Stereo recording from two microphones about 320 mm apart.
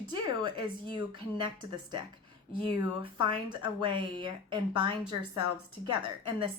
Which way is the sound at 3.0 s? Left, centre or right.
Centre.